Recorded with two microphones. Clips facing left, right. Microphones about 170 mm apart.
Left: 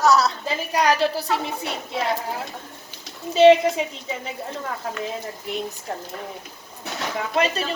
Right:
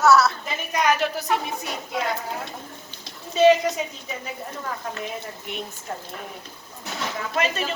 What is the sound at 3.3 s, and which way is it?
Speech, 30° left (ahead or behind).